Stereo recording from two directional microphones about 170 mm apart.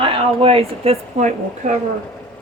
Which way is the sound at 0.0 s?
35° right (ahead or behind).